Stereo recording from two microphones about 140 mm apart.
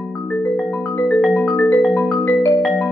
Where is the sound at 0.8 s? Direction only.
15° left (ahead or behind).